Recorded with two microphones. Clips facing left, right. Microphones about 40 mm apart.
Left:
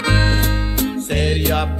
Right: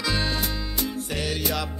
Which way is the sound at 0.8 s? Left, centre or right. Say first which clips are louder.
Left 8 dB; left.